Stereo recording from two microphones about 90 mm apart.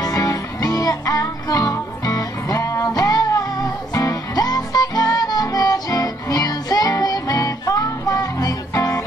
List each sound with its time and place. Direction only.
0.0 s music: 40° left (ahead or behind)